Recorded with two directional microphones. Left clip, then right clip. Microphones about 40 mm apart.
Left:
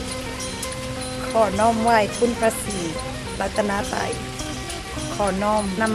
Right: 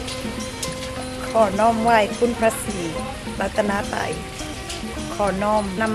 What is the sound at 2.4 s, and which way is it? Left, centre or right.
Speech, centre.